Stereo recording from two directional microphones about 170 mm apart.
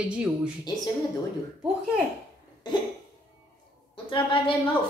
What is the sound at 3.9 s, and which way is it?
Speech, 30° left (ahead or behind).